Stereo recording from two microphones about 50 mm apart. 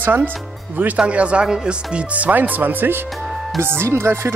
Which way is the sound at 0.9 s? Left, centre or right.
Right.